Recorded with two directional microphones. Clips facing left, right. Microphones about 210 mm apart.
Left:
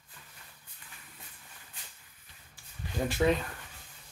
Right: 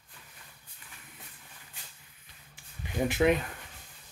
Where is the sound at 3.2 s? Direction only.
5° right (ahead or behind).